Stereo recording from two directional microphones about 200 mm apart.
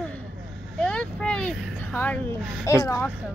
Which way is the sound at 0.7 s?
5° left (ahead or behind).